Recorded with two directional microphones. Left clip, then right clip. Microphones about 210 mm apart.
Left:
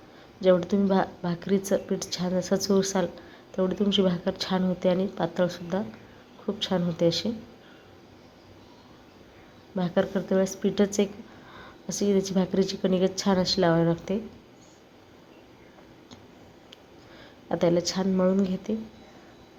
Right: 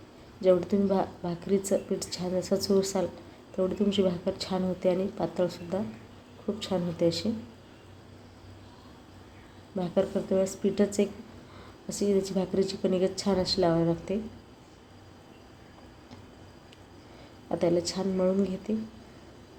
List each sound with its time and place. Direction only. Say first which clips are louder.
0.4 s a woman's voice: left 2 dB; 5° left (ahead or behind)
9.7 s a woman's voice: left 2 dB; 10° left (ahead or behind)
17.5 s a woman's voice: left 3 dB; 10° left (ahead or behind)